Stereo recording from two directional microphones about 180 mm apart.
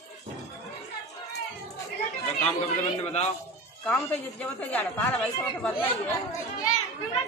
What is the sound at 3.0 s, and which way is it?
Speech, 35° left (ahead or behind).